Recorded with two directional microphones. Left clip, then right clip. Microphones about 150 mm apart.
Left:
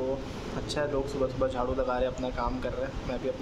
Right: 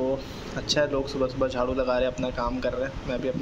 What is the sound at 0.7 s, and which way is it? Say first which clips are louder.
Speech: right 5 dB; 20° right (ahead or behind).